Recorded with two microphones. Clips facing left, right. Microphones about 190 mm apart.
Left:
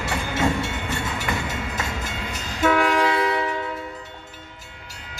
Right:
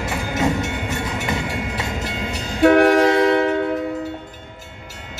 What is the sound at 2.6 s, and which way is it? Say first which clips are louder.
Train: right 7 dB; 55° right (ahead or behind).